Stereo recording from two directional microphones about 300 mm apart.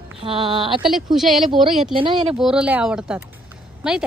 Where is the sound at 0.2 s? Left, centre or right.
Centre.